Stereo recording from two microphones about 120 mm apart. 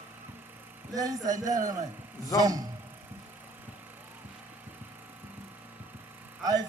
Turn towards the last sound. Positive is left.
turn(degrees=-35)  # may be behind; listen again after turning